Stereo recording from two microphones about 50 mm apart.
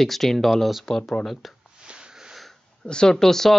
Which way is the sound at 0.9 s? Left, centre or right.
Centre.